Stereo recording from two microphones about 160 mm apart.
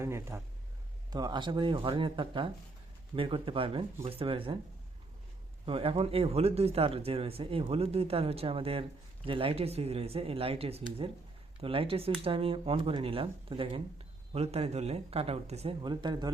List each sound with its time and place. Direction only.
0.0 s speech: 15° right (ahead or behind)
1.1 s speech: 25° right (ahead or behind)
5.6 s speech: 35° right (ahead or behind)
15.8 s speech: 30° right (ahead or behind)